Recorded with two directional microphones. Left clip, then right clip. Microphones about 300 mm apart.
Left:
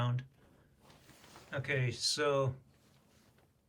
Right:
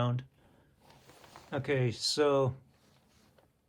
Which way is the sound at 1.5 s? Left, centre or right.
Centre.